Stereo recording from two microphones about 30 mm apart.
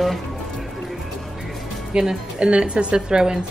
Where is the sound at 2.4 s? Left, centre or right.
Right.